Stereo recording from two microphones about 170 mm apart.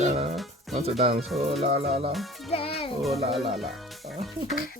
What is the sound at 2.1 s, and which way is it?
Speech, centre (ahead or behind).